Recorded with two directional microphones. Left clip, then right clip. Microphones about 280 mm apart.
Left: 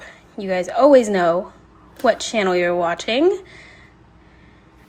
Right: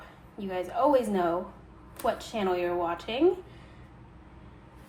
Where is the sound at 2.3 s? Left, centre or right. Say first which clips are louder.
Left 10 dB; left.